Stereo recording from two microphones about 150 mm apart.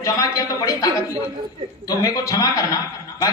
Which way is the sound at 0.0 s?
25° left (ahead or behind).